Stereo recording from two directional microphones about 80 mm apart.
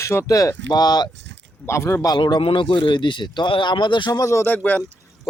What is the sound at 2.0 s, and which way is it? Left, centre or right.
A man's voice, left.